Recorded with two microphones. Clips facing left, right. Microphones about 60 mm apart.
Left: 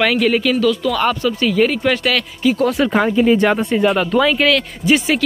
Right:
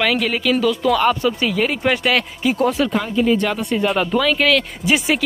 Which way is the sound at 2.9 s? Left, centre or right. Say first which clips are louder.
Left 4 dB; left.